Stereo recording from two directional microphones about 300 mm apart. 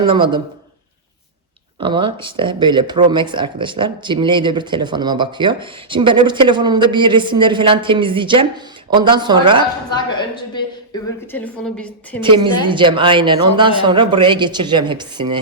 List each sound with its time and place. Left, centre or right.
0.0 s speech: centre
1.8 s speech: centre
11.3 s a woman's voice: centre
12.2 s speech: centre